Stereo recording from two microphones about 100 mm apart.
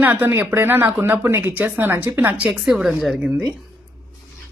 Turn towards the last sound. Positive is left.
turn(degrees=-5)  # may be behind; listen again after turning